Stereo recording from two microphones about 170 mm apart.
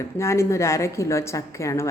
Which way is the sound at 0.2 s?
15° left (ahead or behind).